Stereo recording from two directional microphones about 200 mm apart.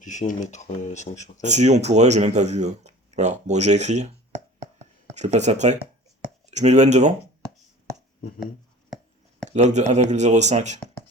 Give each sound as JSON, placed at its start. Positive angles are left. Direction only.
{"t": 0.0, "sound": "speech", "side_deg": 40}
{"t": 1.4, "sound": "speech", "side_deg": -35}
{"t": 4.6, "sound": "a sound", "side_deg": -35}
{"t": 6.4, "sound": "speech", "side_deg": -35}
{"t": 9.5, "sound": "speech", "side_deg": -35}